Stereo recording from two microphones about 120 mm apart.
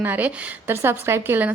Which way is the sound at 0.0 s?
15° right (ahead or behind).